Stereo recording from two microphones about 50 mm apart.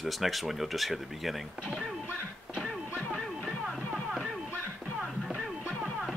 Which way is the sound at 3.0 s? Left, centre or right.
Centre.